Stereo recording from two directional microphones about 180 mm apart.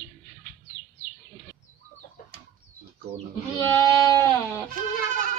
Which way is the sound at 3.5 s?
15° left (ahead or behind).